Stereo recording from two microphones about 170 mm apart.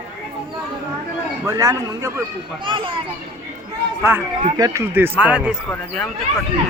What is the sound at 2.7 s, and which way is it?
Speech, 30° right (ahead or behind).